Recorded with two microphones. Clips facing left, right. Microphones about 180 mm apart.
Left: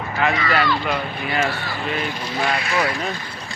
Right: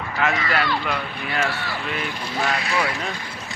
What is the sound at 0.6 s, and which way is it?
Speech, 55° right (ahead or behind).